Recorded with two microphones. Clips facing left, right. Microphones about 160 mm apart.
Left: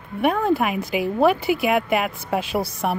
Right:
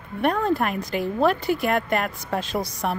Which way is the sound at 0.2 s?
5° left (ahead or behind).